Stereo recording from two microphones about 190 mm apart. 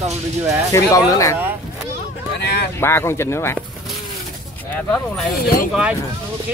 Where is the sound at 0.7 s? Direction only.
15° left (ahead or behind).